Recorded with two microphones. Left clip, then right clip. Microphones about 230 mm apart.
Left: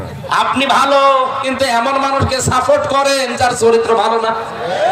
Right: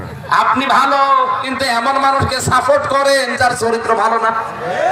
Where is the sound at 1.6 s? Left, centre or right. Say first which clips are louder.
Even; left.